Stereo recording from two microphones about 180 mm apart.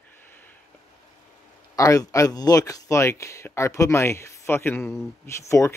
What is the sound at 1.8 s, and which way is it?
Speech, 20° left (ahead or behind).